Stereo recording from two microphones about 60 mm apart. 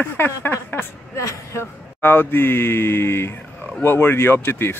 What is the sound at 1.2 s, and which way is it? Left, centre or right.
Speech, left.